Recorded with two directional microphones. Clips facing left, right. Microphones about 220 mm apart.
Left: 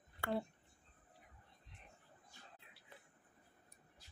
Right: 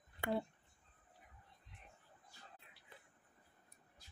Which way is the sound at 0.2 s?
20° right (ahead or behind).